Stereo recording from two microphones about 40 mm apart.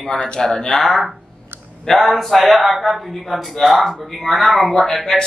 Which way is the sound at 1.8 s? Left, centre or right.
Centre.